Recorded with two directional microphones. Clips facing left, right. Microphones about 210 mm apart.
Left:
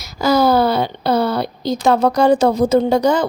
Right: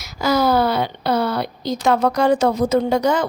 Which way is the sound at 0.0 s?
35° left (ahead or behind).